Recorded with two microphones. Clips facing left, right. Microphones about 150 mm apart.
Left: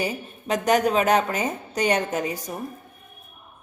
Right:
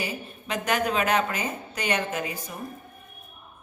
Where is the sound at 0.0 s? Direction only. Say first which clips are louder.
Left 5 dB; 40° left (ahead or behind).